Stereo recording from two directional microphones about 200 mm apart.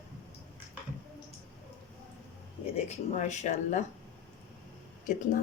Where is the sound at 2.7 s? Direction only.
35° left (ahead or behind).